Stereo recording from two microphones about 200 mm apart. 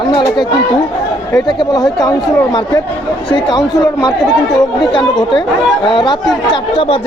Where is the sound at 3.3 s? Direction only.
20° left (ahead or behind).